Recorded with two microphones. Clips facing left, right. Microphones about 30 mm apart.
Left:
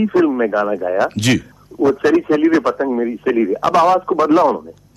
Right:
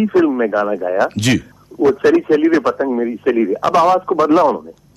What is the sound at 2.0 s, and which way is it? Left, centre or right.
A man's voice, centre.